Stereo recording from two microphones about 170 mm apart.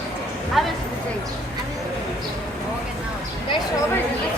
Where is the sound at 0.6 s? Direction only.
Centre (ahead or behind).